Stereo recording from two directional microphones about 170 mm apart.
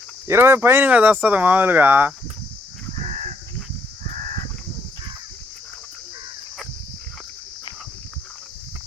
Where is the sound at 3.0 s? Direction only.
45° right (ahead or behind).